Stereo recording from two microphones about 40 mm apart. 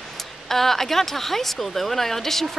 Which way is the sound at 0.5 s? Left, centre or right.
Centre.